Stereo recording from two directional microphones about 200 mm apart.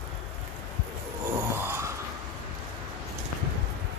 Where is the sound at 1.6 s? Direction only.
10° right (ahead or behind).